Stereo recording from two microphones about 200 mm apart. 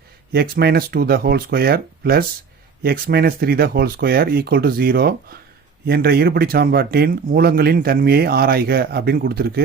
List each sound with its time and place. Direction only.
0.3 s speech: 50° right (ahead or behind)